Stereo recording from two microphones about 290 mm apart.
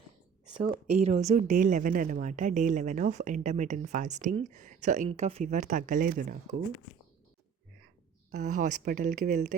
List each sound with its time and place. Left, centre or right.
0.6 s speech: right
8.3 s speech: right